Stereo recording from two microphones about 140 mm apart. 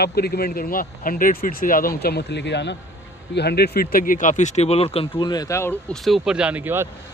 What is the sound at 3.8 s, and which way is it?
Speech, 90° left.